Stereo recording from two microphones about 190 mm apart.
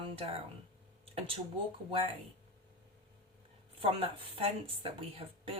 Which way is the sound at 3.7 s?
30° right (ahead or behind).